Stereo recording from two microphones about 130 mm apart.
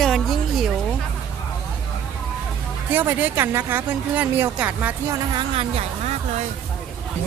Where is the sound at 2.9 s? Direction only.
15° right (ahead or behind).